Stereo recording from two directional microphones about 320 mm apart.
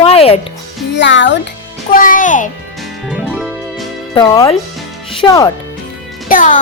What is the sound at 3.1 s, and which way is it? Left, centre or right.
Music, centre.